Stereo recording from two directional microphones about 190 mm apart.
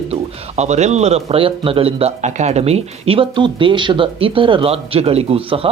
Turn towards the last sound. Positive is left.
turn(degrees=-30)  # may be behind; listen again after turning